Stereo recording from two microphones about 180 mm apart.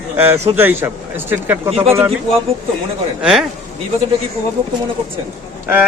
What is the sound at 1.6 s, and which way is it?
Speech, 35° right (ahead or behind).